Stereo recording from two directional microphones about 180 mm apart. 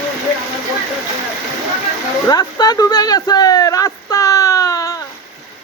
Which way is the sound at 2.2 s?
20° left (ahead or behind).